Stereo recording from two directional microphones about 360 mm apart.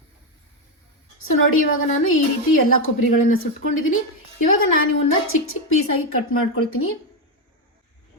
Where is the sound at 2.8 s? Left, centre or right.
Left.